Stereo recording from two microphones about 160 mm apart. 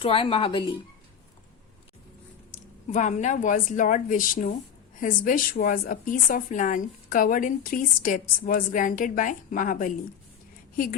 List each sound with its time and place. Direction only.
0.0 s speech: 35° left (ahead or behind)
2.9 s a woman's voice: 50° left (ahead or behind)